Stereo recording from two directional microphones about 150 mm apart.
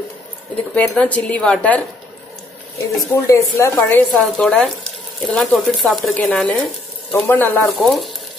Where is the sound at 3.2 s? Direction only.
20° left (ahead or behind).